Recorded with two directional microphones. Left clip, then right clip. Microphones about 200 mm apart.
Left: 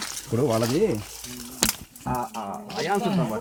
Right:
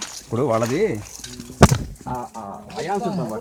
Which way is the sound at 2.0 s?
20° left (ahead or behind).